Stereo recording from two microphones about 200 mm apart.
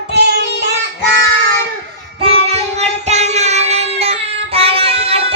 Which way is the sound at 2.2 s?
30° right (ahead or behind).